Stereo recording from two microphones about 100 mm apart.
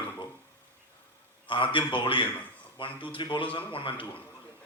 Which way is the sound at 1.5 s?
55° left (ahead or behind).